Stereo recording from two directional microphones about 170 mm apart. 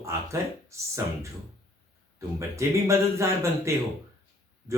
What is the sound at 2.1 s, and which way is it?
Speech, 15° right (ahead or behind).